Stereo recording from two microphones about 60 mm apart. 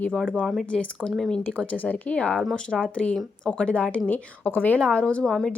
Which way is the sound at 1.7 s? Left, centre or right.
Left.